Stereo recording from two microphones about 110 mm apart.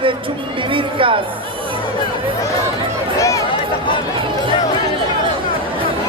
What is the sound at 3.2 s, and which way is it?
Speech, 30° left (ahead or behind).